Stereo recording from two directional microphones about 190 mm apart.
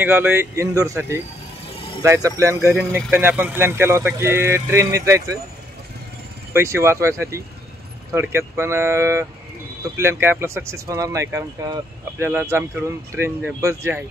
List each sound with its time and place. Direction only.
0.0 s speech: 10° right (ahead or behind)
2.7 s speech: centre (ahead or behind)
6.5 s speech: 15° right (ahead or behind)